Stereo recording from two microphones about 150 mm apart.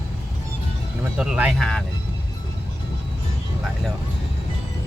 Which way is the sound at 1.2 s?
5° right (ahead or behind).